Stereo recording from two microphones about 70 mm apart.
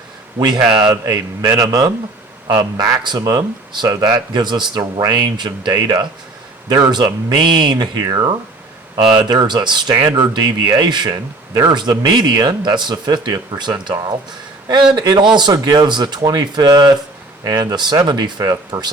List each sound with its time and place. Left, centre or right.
0.3 s speech: right
0.6 s a man's voice: centre
1.0 s a man's voice: right
4.9 s a man's voice: right
9.1 s speech: right
9.9 s speech: right
10.2 s speech: right
14.9 s a man's voice: right
17.4 s a man's voice: right
18.0 s speech: right